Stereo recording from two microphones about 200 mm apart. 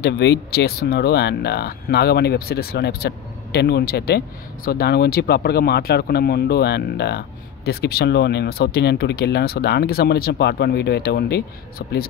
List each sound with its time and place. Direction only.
0.0 s speech: 55° left (ahead or behind)